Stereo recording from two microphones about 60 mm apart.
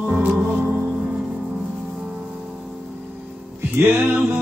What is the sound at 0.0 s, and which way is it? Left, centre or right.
Music, right.